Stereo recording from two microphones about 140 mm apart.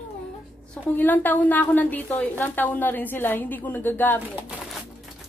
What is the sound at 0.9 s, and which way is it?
A woman's voice, 15° left (ahead or behind).